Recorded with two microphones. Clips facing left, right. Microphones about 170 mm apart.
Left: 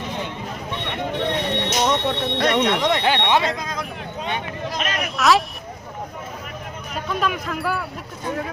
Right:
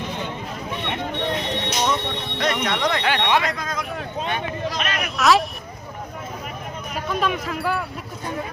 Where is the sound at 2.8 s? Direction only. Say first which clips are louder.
Left 2 dB; 25° left (ahead or behind).